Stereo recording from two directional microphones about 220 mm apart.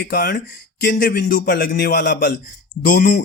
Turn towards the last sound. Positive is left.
turn(degrees=40)  # may be behind; listen again after turning